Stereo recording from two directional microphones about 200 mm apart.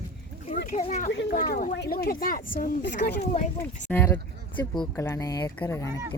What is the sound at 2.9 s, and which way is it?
Speech, 55° left (ahead or behind).